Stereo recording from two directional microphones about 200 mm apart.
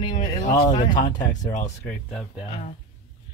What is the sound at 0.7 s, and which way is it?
Speech, 40° left (ahead or behind).